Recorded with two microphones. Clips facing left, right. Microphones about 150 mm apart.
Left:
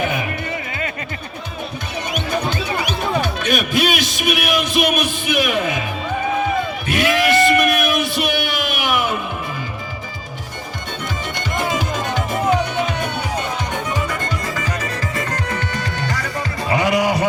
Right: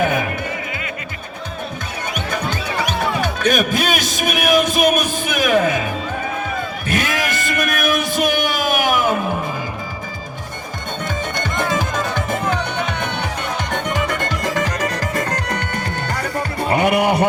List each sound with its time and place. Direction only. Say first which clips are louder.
3.4 s a man's voice: right 3 dB; 45° right (ahead or behind)
6.9 s a sound: left 6 dB; 45° right (ahead or behind)
15.2 s music: right 2 dB; 40° right (ahead or behind)
15.6 s music: even; 55° right (ahead or behind)